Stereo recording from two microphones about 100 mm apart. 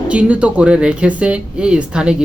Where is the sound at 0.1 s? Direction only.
10° right (ahead or behind).